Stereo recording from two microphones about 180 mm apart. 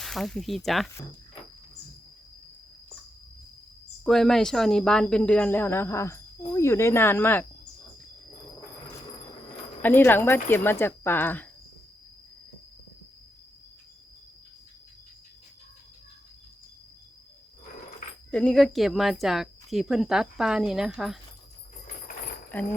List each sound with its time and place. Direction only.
0.0 s speech: centre (ahead or behind)
4.0 s a woman's voice: centre (ahead or behind)
9.8 s a woman's voice: 10° left (ahead or behind)
18.3 s speech: 5° left (ahead or behind)